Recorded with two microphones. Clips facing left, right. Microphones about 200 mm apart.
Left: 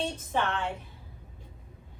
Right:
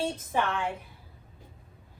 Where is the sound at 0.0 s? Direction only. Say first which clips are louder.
Right 1 dB; 10° right (ahead or behind).